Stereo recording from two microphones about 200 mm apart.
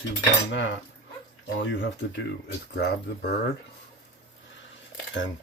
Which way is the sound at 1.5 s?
65° left (ahead or behind).